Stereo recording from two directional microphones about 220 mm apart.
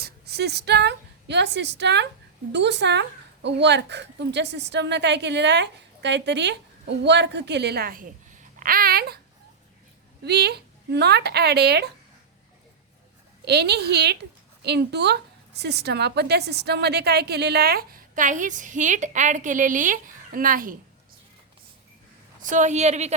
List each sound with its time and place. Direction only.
0.0 s a woman's voice: 50° right (ahead or behind)
10.2 s a woman's voice: 50° right (ahead or behind)
13.4 s a woman's voice: 50° right (ahead or behind)
22.4 s a woman's voice: 35° right (ahead or behind)